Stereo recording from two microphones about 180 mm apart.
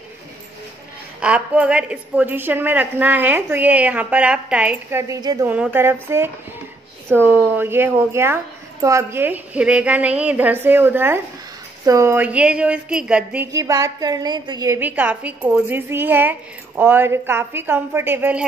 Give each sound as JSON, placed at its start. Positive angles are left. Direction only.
{"t": 1.2, "sound": "a woman's voice", "side_deg": -5}
{"t": 5.0, "sound": "a woman's voice", "side_deg": -20}